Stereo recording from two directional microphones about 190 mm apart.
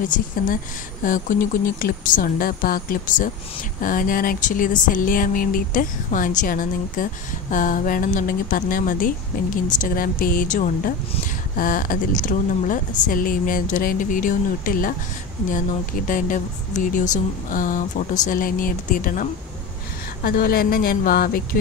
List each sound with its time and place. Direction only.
1.0 s speech: 45° left (ahead or behind)
16.1 s speech: 45° left (ahead or behind)
20.2 s speech: 50° left (ahead or behind)